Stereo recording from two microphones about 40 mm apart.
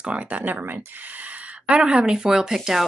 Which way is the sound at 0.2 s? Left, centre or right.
Right.